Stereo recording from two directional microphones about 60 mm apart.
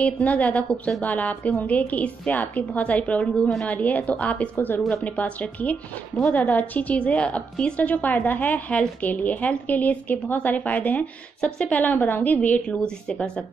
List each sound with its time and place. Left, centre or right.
0.0 s a woman's voice: left